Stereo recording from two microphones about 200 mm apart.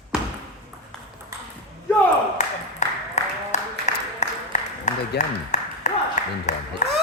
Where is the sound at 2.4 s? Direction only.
35° left (ahead or behind).